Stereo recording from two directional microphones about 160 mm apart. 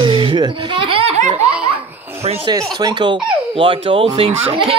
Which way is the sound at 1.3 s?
10° right (ahead or behind).